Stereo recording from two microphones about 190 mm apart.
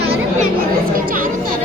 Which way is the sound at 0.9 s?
45° right (ahead or behind).